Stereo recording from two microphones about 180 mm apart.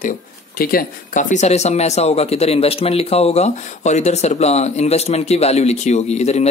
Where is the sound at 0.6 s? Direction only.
55° left (ahead or behind).